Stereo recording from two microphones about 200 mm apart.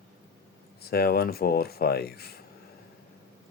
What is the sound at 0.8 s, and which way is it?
Speech, 50° left (ahead or behind).